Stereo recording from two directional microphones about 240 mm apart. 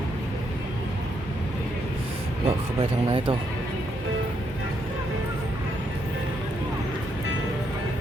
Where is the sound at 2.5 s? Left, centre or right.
Right.